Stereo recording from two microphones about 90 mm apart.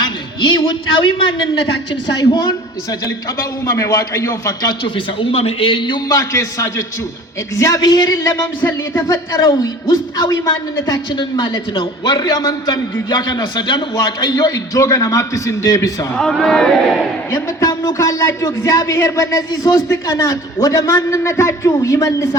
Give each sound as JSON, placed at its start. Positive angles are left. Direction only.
{"t": 0.0, "sound": "a man's voice", "side_deg": 55}
{"t": 2.3, "sound": "a man's voice", "side_deg": 55}
{"t": 3.3, "sound": "speech", "side_deg": 35}
{"t": 4.9, "sound": "a man's voice", "side_deg": 80}
{"t": 6.1, "sound": "speech", "side_deg": 40}
{"t": 8.6, "sound": "speech", "side_deg": 25}
{"t": 9.0, "sound": "speech", "side_deg": 40}
{"t": 9.5, "sound": "a man's voice", "side_deg": 50}
{"t": 11.1, "sound": "a man's voice", "side_deg": 60}
{"t": 13.9, "sound": "speech", "side_deg": 45}
{"t": 16.1, "sound": "speech", "side_deg": 5}
{"t": 17.3, "sound": "speech", "side_deg": 35}